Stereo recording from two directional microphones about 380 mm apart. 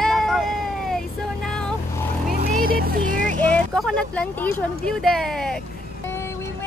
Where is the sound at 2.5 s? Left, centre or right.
Right.